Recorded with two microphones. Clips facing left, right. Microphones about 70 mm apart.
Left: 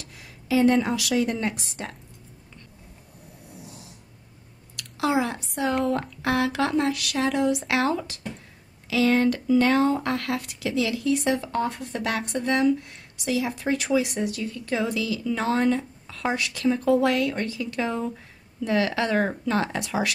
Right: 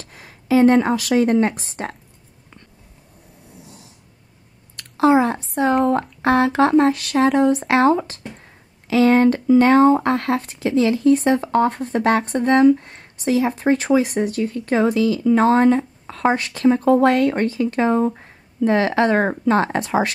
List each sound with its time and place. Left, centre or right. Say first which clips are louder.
0.0 s a woman's voice: right 3 dB; right
4.7 s speech: right 9 dB; right